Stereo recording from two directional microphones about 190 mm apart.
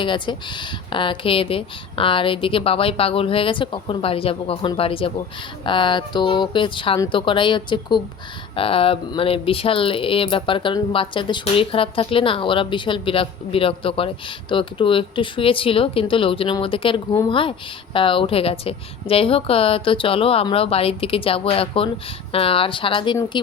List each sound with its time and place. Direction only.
0.0 s speech: 25° left (ahead or behind)